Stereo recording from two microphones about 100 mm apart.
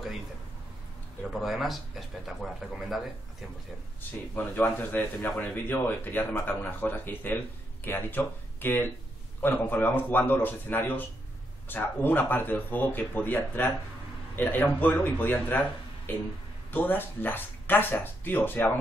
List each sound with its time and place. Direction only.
1.4 s speech: centre (ahead or behind)
4.4 s speech: 20° left (ahead or behind)